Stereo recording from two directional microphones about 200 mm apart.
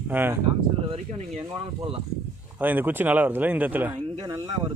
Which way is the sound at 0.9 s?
30° right (ahead or behind).